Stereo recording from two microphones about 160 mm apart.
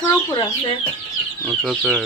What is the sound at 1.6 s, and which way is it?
Speech, centre (ahead or behind).